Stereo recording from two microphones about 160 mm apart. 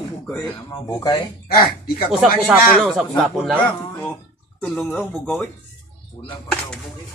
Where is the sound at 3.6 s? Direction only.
10° left (ahead or behind).